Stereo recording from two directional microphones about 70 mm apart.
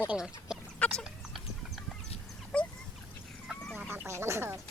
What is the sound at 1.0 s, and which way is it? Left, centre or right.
Horse, centre.